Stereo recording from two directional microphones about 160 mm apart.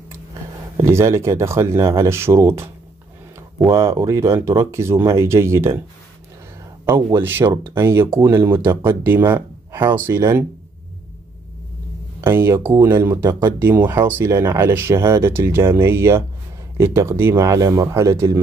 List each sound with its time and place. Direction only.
0.7 s speech: 15° right (ahead or behind)
6.9 s speech: 15° right (ahead or behind)
12.2 s speech: 15° right (ahead or behind)